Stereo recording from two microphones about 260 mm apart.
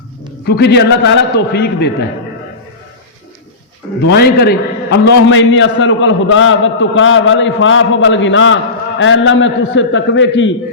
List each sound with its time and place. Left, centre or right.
0.4 s a man's voice: left
4.0 s a man's voice: left